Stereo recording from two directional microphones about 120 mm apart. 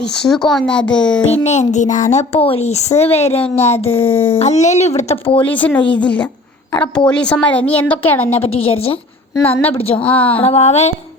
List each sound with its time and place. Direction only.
0.3 s a woman's voice: 5° left (ahead or behind)
1.5 s speech: 75° left (ahead or behind); by 3.8 s 60° left (ahead or behind)
3.9 s speech: 20° left (ahead or behind)
4.4 s speech: 70° left (ahead or behind)
5.2 s a woman's voice: 50° left (ahead or behind)
5.5 s a woman's voice: 10° left (ahead or behind)
8.4 s a woman's voice: 55° left (ahead or behind)
9.4 s a woman's voice: 15° left (ahead or behind)
10.4 s speech: 60° left (ahead or behind)